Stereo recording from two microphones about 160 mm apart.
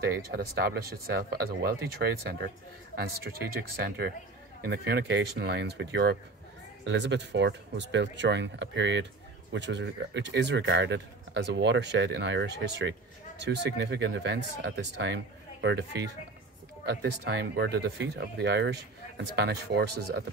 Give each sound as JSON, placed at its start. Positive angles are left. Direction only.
{"t": 0.0, "sound": "speech", "side_deg": -75}